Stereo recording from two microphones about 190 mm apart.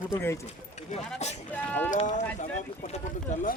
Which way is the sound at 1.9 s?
35° left (ahead or behind).